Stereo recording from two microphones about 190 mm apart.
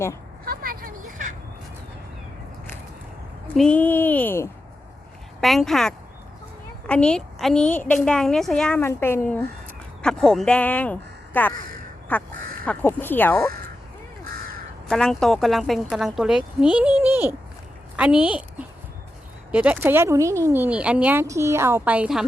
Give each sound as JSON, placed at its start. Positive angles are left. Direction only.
{"t": 0.4, "sound": "vehicle", "side_deg": -50}
{"t": 3.5, "sound": "a woman's voice", "side_deg": 5}
{"t": 14.8, "sound": "a woman's voice", "side_deg": 5}
{"t": 19.5, "sound": "speech", "side_deg": -5}